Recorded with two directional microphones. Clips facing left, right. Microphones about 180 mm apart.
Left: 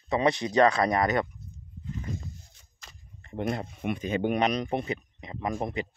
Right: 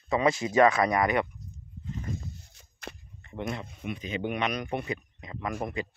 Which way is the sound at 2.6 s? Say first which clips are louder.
Right 12 dB; 65° right (ahead or behind).